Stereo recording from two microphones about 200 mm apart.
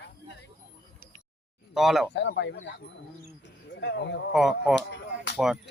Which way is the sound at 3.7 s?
60° left (ahead or behind).